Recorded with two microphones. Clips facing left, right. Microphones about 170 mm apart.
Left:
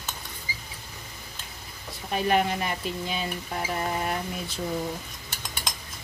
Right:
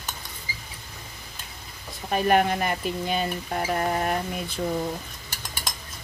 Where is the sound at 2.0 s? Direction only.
50° right (ahead or behind).